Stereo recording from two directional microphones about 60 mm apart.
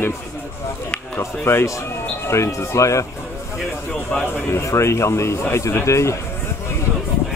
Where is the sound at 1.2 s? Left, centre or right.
Left.